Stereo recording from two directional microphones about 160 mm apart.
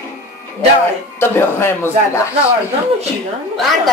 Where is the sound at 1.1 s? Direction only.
15° left (ahead or behind).